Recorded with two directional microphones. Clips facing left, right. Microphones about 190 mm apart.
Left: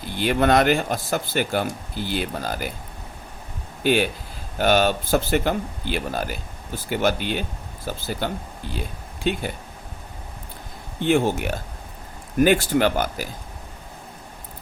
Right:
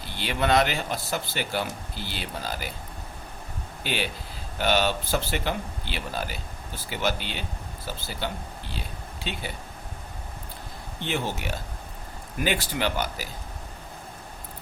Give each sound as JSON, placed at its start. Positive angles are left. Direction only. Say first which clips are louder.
{"t": 0.2, "sound": "speech", "louder": "left 5 dB", "side_deg": 50}
{"t": 3.8, "sound": "speech", "louder": "left 10 dB", "side_deg": 50}
{"t": 11.0, "sound": "speech", "louder": "left 10 dB", "side_deg": 50}